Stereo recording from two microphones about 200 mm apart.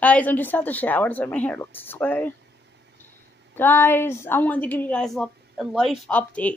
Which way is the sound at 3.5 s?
10° left (ahead or behind).